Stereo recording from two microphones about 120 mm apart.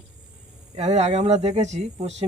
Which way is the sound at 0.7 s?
65° right (ahead or behind).